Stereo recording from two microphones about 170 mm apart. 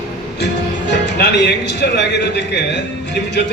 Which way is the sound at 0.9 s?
85° left.